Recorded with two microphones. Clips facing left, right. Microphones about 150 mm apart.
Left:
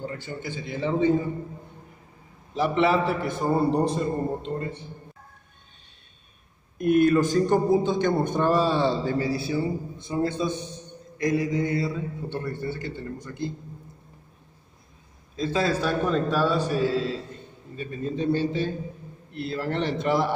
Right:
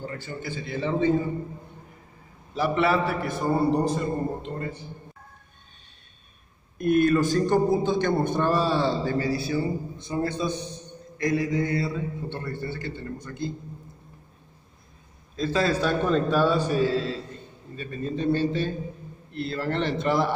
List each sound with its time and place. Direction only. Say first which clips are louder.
0.0 s a man's voice: left 1 dB; 15° left (ahead or behind)
2.5 s a man's voice: left 1 dB; 25° left (ahead or behind)
6.8 s a man's voice: left 1 dB; 15° left (ahead or behind)
15.3 s a man's voice: right 1 dB; 15° left (ahead or behind); by 16.9 s centre (ahead or behind)
17.7 s a man's voice: left 1 dB; 10° left (ahead or behind)